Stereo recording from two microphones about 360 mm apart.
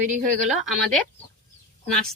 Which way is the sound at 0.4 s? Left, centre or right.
Centre.